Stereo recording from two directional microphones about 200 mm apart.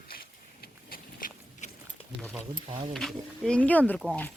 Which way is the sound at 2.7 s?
30° right (ahead or behind).